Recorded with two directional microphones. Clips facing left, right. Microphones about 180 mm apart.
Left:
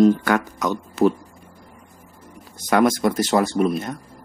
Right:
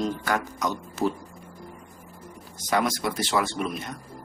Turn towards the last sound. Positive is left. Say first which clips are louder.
# left 10 dB
turn(degrees=45)  # may be behind; listen again after turning